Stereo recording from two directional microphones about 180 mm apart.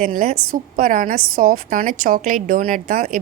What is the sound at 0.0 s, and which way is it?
A woman's voice, 50° right (ahead or behind).